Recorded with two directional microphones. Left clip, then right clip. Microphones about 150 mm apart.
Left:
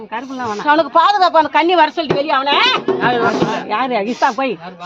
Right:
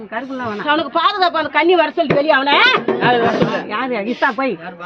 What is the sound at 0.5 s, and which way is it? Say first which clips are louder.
A woman's voice: left 5 dB; 40° left (ahead or behind).